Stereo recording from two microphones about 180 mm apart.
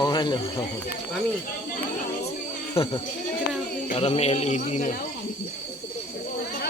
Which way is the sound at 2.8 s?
30° left (ahead or behind).